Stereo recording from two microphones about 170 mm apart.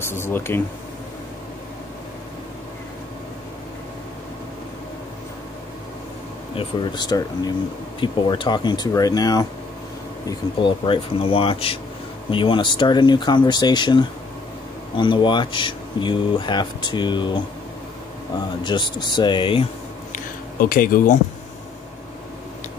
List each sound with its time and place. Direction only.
0.1 s speech: 15° left (ahead or behind)
6.5 s speech: 30° left (ahead or behind)
18.6 s speech: 25° left (ahead or behind)
20.6 s speech: 55° left (ahead or behind)